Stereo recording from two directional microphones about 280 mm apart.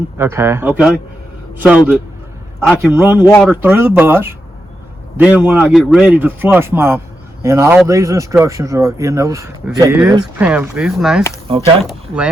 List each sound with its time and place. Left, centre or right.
0.2 s a man's voice: centre
2.9 s speech: centre
3.2 s speech: centre
3.5 s speech: centre
11.4 s speech: centre
11.9 s speech: centre